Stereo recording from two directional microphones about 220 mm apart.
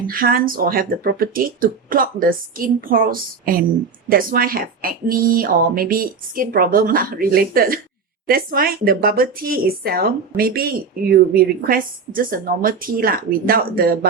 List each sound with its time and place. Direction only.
0.1 s speech: 40° right (ahead or behind)